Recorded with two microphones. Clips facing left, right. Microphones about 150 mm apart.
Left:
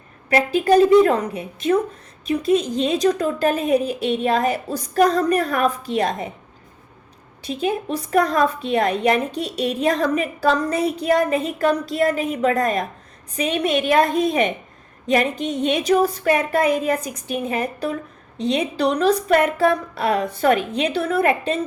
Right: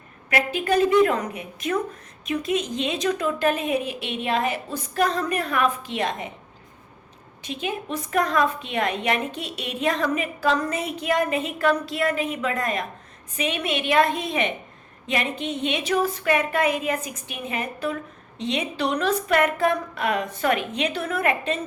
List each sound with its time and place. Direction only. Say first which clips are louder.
0.3 s a woman's voice: left 7 dB; 35° left (ahead or behind)
7.4 s a woman's voice: left 6 dB; 35° left (ahead or behind)